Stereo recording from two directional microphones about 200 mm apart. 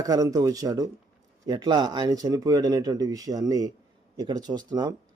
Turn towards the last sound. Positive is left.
turn(degrees=-20)  # may be behind; listen again after turning